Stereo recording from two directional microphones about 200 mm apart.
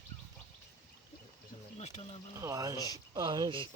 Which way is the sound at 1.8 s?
30° left (ahead or behind).